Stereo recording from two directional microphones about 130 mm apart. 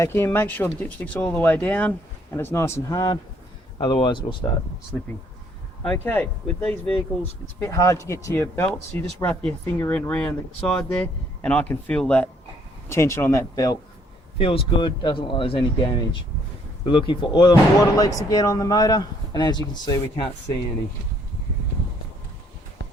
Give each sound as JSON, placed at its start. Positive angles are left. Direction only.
{"t": 0.0, "sound": "a man's voice", "side_deg": 20}
{"t": 5.8, "sound": "speech", "side_deg": 10}
{"t": 12.9, "sound": "a man's voice", "side_deg": 20}
{"t": 14.3, "sound": "speech", "side_deg": 45}